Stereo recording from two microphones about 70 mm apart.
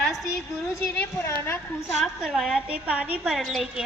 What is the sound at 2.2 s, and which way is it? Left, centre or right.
Speech, centre.